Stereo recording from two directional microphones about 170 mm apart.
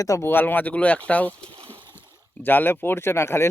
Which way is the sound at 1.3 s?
30° right (ahead or behind).